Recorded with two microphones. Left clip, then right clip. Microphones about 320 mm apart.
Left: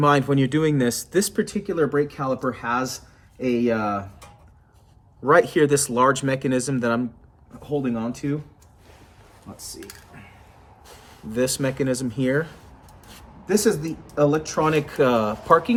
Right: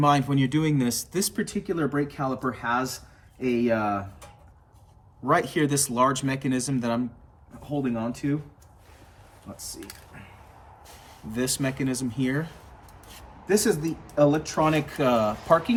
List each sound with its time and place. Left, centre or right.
0.0 s speech: centre
5.2 s speech: centre
9.6 s speech: centre
11.3 s speech: centre